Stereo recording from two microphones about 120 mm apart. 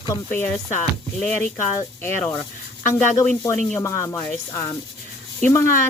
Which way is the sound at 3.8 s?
25° left (ahead or behind).